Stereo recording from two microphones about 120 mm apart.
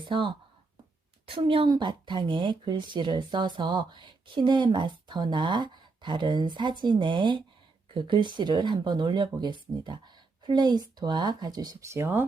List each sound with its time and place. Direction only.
0.0 s a woman's voice: 40° right (ahead or behind); by 12.2 s 20° right (ahead or behind)